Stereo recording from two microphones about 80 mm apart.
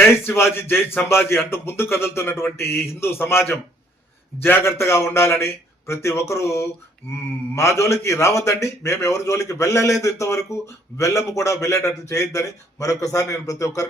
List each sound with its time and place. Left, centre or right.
0.0 s a man's voice: left